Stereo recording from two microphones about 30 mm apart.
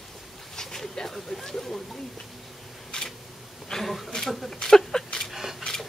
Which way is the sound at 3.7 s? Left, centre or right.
Centre.